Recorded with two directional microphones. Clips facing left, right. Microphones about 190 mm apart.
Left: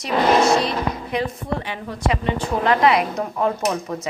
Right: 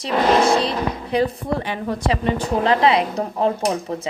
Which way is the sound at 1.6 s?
40° right (ahead or behind).